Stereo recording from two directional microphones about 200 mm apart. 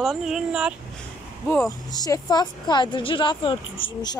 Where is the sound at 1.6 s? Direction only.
20° left (ahead or behind).